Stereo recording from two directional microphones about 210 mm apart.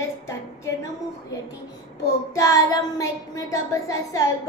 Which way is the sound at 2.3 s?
15° left (ahead or behind).